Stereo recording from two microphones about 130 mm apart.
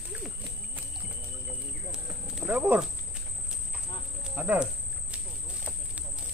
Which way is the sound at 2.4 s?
15° right (ahead or behind).